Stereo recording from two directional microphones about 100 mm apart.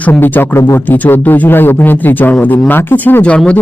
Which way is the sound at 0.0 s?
20° left (ahead or behind).